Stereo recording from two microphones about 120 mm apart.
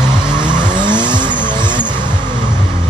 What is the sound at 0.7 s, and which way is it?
Vehicle, 40° right (ahead or behind).